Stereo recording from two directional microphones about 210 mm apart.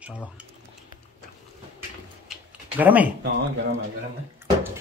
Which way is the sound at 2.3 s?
5° right (ahead or behind).